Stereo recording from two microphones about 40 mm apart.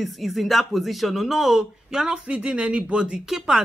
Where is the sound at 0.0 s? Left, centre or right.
Centre.